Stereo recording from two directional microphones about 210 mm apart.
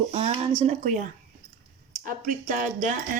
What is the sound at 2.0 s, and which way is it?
Speech, 40° right (ahead or behind).